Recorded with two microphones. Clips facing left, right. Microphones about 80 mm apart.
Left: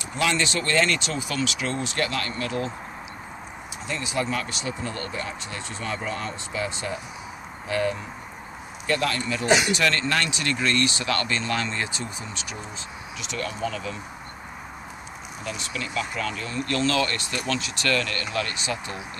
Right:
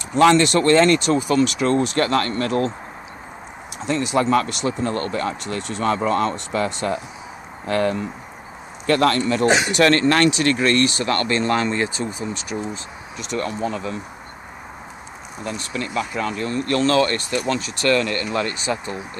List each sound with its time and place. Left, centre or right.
0.2 s speech: right
0.7 s speech: right
3.8 s speech: right
15.4 s speech: right